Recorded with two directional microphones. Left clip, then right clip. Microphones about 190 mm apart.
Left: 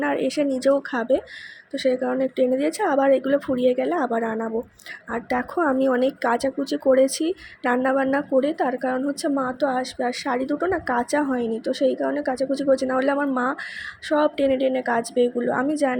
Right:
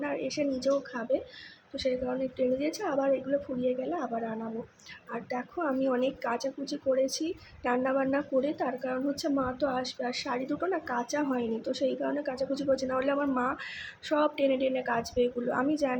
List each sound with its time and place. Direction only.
0.0 s a woman's voice: 40° left (ahead or behind)